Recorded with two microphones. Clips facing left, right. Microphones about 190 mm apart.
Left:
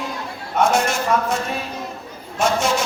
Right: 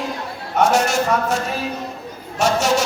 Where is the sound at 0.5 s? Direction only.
40° right (ahead or behind).